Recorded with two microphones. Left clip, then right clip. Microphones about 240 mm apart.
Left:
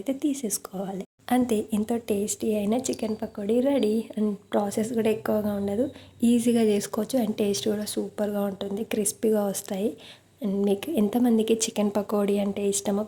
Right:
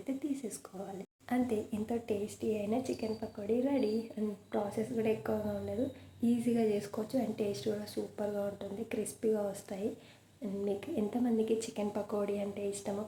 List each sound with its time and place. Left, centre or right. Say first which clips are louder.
0.2 s speech: left 11 dB; left